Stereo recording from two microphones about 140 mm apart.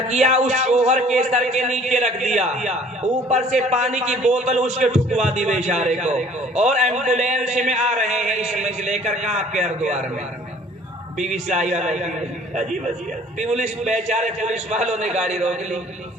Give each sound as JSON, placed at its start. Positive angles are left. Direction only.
{"t": 0.1, "sound": "a man's voice", "side_deg": -55}
{"t": 11.2, "sound": "a man's voice", "side_deg": -55}
{"t": 13.8, "sound": "a man's voice", "side_deg": -55}